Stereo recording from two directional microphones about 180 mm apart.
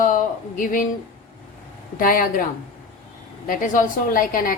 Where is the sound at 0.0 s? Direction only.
50° left (ahead or behind).